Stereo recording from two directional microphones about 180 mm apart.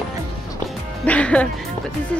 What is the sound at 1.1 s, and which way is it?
Speech, 5° left (ahead or behind).